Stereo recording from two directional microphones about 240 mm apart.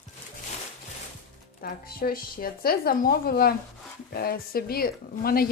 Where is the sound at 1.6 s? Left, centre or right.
Left.